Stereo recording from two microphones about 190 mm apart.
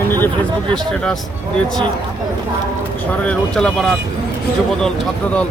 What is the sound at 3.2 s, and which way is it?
Speech, 5° left (ahead or behind).